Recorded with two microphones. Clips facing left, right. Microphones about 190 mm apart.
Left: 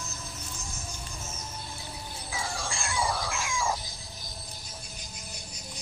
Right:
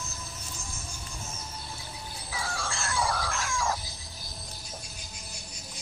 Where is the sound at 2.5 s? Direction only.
10° left (ahead or behind).